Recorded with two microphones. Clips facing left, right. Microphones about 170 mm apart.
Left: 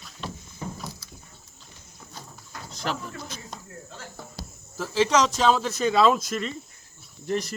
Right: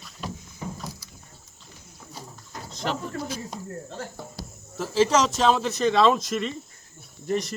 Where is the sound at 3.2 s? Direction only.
10° right (ahead or behind).